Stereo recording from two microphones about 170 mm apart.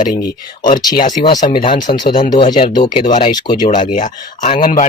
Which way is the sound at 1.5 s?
30° left (ahead or behind).